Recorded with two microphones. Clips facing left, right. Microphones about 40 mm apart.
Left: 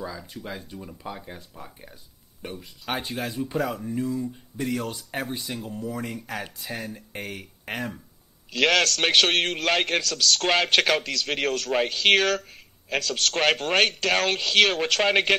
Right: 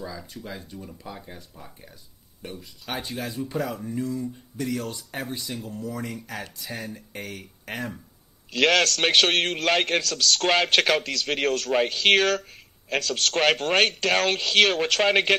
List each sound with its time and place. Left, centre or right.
0.0 s speech: centre
8.5 s a man's voice: centre